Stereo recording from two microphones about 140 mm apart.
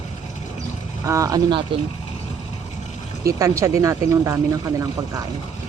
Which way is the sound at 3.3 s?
20° right (ahead or behind).